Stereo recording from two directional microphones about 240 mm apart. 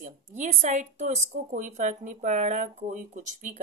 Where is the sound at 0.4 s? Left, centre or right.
Right.